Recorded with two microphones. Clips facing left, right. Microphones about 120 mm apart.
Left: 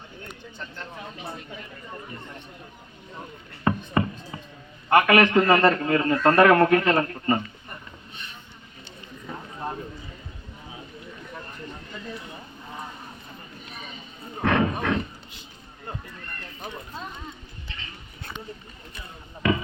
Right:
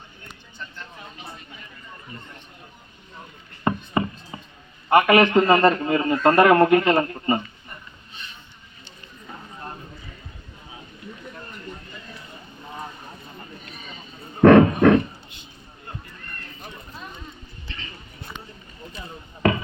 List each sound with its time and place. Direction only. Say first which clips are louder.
4.0 s chopping: right 1 dB; 20° right (ahead or behind)
4.3 s a sound: even; 20° right (ahead or behind)
4.9 s a man's voice: right 2 dB; 20° right (ahead or behind)
14.4 s dog: right 11 dB; 55° right (ahead or behind)